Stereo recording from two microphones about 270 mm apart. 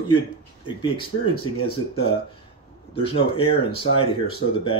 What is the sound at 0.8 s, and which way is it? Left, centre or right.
Speech, centre.